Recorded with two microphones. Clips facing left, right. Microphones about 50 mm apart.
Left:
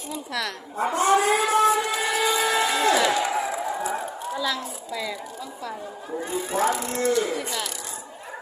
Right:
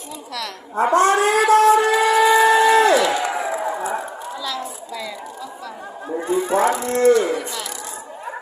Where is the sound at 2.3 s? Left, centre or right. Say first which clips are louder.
Right 10 dB; right.